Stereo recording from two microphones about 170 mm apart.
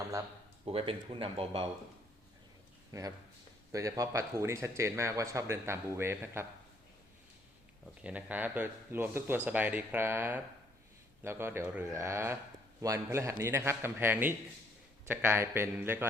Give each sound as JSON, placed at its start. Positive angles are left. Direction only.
{"t": 0.6, "sound": "speech", "side_deg": -35}
{"t": 2.9, "sound": "speech", "side_deg": -20}
{"t": 8.0, "sound": "speech", "side_deg": -10}